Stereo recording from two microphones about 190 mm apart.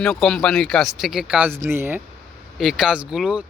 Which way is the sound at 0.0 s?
5° left (ahead or behind).